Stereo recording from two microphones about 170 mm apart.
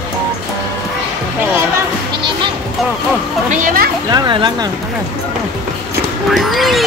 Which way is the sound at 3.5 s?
55° right (ahead or behind).